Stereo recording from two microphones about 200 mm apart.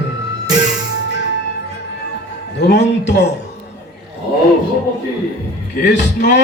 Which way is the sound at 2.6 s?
55° left (ahead or behind).